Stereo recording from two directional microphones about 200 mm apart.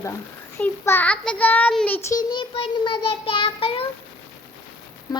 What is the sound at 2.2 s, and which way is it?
Child singing, 25° left (ahead or behind).